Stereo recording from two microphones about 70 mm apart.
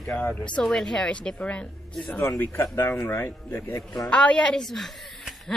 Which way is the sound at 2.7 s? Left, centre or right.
Left.